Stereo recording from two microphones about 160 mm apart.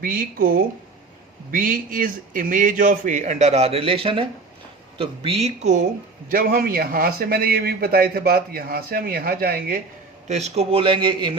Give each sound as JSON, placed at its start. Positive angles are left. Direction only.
{"t": 0.0, "sound": "a man's voice", "side_deg": -60}
{"t": 6.3, "sound": "a man's voice", "side_deg": -65}
{"t": 10.2, "sound": "a man's voice", "side_deg": -45}